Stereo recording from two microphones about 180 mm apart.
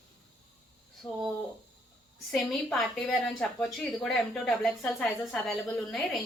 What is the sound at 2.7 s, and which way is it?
Speech, centre (ahead or behind).